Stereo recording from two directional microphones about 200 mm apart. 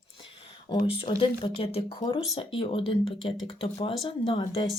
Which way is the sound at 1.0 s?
30° left (ahead or behind).